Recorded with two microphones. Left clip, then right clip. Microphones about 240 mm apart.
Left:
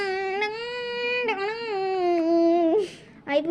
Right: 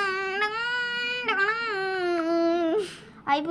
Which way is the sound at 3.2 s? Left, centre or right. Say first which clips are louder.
Even; right.